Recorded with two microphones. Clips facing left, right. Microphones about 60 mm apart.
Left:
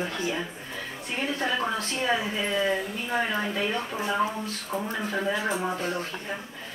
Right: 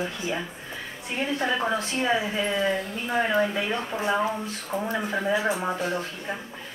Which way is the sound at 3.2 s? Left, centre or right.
Centre.